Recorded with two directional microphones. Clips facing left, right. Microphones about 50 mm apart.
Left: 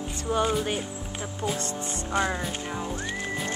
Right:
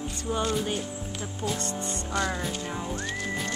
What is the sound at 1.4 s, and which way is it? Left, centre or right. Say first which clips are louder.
Speech: left 1 dB; right.